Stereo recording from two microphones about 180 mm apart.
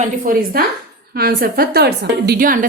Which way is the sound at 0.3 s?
50° right (ahead or behind).